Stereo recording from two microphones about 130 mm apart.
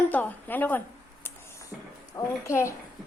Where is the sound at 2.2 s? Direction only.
25° left (ahead or behind).